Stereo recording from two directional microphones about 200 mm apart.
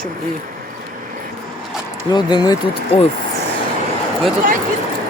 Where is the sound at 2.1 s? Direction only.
20° left (ahead or behind).